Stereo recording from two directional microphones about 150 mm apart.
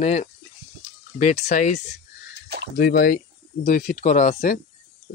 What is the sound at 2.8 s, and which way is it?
Speech, 75° left (ahead or behind).